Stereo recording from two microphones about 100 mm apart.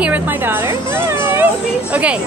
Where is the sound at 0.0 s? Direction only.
15° right (ahead or behind).